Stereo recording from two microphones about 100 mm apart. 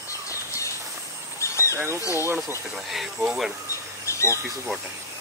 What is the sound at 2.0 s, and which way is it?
Speech, 30° left (ahead or behind).